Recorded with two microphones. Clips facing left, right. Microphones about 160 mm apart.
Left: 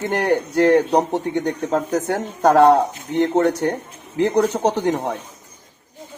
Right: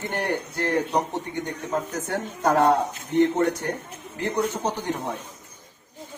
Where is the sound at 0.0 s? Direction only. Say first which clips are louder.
Left 8 dB; 85° left.